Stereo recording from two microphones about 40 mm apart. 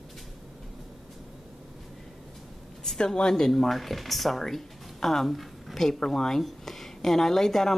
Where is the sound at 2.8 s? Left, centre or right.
Centre.